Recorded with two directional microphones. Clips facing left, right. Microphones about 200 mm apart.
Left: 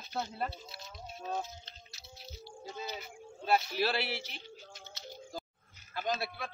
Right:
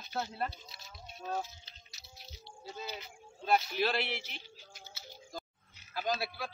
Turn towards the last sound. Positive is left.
turn(degrees=0)  # may be behind; listen again after turning